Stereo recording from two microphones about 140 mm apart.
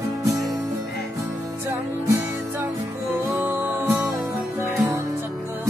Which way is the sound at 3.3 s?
15° right (ahead or behind).